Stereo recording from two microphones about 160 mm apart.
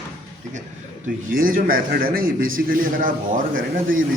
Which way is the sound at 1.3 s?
60° right (ahead or behind).